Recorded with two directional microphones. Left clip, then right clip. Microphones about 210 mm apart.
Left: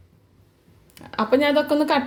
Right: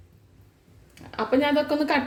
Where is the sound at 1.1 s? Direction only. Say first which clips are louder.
Left 4 dB; 35° left (ahead or behind).